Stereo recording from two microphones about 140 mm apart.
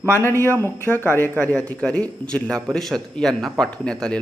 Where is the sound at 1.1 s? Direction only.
15° left (ahead or behind).